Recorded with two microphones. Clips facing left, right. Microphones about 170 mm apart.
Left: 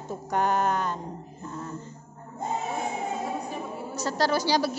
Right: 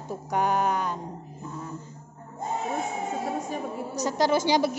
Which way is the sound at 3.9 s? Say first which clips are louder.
Right 2 dB; 15° right (ahead or behind).